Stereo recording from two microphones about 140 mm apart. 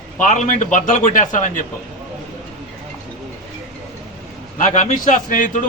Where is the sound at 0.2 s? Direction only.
60° left (ahead or behind).